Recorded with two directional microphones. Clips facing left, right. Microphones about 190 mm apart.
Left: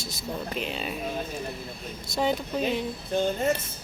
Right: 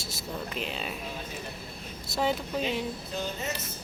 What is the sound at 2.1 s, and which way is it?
Speech, centre (ahead or behind).